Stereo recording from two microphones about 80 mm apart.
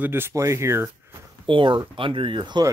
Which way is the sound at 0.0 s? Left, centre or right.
Right.